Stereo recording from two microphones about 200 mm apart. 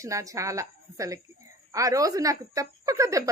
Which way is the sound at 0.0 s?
15° right (ahead or behind).